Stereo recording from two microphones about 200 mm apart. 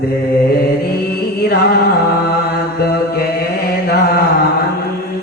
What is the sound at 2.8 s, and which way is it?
Chant, 50° left (ahead or behind).